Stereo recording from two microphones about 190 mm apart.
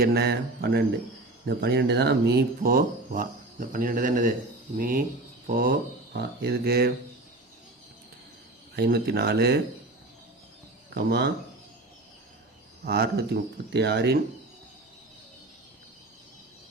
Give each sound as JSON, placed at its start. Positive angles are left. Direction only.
{"t": 0.0, "sound": "speech", "side_deg": -55}
{"t": 8.7, "sound": "speech", "side_deg": -55}
{"t": 10.9, "sound": "speech", "side_deg": -65}
{"t": 12.8, "sound": "speech", "side_deg": -55}